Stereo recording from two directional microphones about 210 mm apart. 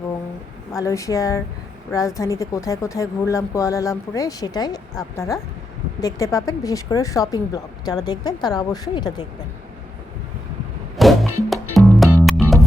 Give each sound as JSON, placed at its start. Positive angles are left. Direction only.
{"t": 0.8, "sound": "speech", "side_deg": 15}
{"t": 10.9, "sound": "music", "side_deg": 0}